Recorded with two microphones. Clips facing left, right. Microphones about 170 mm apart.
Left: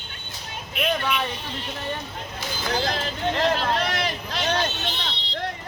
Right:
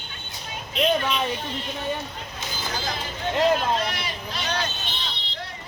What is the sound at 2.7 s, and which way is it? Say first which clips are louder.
Speech: left 6 dB; 65° left (ahead or behind).